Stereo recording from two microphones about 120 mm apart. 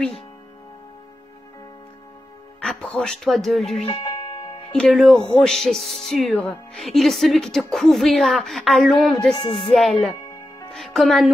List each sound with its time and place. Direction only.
2.6 s speech: 5° left (ahead or behind)
4.0 s music: 30° left (ahead or behind)
4.7 s speech: 5° left (ahead or behind)